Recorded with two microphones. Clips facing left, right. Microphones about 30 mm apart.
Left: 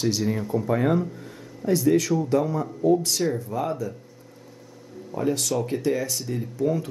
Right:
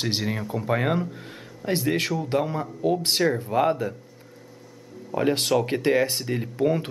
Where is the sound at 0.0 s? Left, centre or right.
Right.